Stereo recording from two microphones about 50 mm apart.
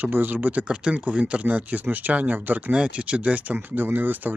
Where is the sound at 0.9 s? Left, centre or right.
Right.